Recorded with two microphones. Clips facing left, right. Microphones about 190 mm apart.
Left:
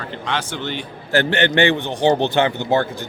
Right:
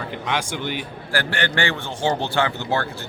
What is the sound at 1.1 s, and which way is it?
A man's voice, 20° left (ahead or behind).